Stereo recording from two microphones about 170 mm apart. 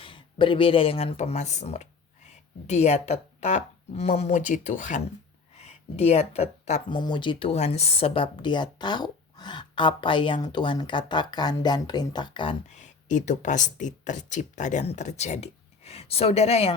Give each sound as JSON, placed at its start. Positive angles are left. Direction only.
{"t": 0.0, "sound": "speech", "side_deg": 30}
{"t": 6.9, "sound": "speech", "side_deg": 30}
{"t": 12.6, "sound": "speech", "side_deg": 45}